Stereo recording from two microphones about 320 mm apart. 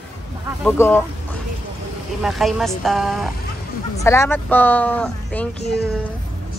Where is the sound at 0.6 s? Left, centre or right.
Centre.